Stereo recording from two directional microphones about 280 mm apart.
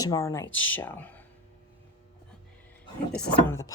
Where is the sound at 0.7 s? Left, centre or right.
Centre.